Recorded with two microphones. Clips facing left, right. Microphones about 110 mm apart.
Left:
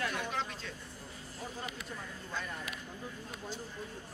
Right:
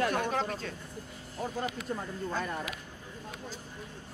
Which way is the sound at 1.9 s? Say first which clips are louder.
Right 8 dB; 50° right (ahead or behind).